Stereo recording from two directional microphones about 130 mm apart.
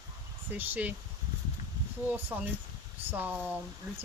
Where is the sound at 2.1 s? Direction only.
15° right (ahead or behind).